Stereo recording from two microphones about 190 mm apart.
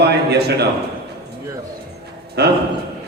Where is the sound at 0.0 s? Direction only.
60° right (ahead or behind).